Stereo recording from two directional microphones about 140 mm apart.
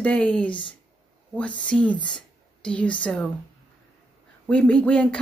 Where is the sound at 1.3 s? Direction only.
10° left (ahead or behind).